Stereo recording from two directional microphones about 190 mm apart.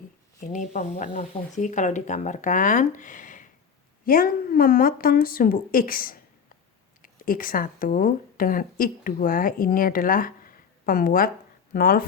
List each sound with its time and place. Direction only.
0.3 s a woman's voice: 40° left (ahead or behind)